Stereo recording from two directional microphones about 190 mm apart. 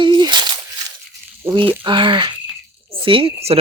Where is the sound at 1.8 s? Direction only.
25° right (ahead or behind).